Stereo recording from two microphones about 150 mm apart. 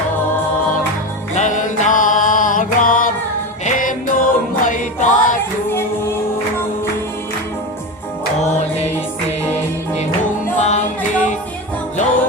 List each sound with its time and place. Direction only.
1.4 s music: 55° left (ahead or behind)
8.4 s music: 50° left (ahead or behind)